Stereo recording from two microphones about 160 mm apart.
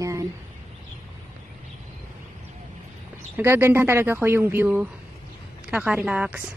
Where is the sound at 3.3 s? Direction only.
15° right (ahead or behind).